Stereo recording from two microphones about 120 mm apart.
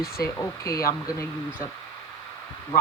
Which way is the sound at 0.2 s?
30° left (ahead or behind).